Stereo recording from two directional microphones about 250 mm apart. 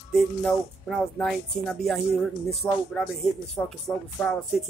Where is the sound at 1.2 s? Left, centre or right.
Centre.